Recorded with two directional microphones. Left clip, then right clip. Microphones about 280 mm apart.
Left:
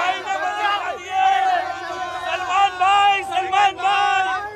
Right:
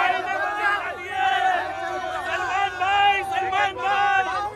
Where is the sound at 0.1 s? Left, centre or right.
Centre.